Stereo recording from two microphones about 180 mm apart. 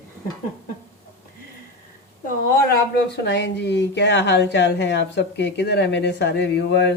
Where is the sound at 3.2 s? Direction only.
75° left (ahead or behind).